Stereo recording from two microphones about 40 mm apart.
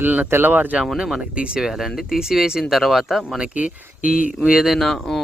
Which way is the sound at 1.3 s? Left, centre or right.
Right.